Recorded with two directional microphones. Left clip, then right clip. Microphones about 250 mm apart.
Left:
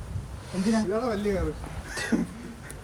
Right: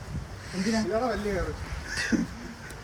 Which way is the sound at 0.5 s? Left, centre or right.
Left.